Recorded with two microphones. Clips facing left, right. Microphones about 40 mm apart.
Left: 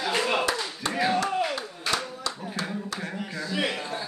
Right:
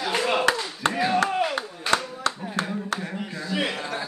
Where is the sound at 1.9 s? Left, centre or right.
Right.